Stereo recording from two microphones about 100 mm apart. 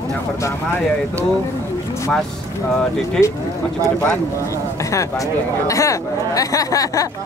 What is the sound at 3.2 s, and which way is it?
Speech, 5° left (ahead or behind).